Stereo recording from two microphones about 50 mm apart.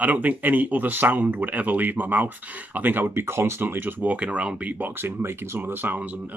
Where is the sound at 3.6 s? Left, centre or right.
Right.